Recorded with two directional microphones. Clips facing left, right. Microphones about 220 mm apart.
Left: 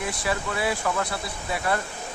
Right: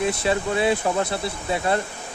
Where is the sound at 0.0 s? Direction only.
25° right (ahead or behind).